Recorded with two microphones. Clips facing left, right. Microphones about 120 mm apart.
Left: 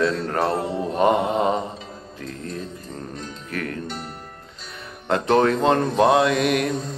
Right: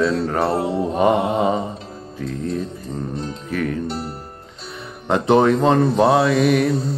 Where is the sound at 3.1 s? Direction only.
30° right (ahead or behind).